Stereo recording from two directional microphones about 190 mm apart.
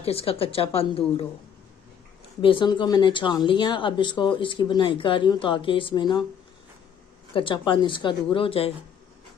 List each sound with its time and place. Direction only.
0.0 s a woman's voice: 30° left (ahead or behind)
2.4 s speech: 25° left (ahead or behind)
7.3 s speech: 25° left (ahead or behind)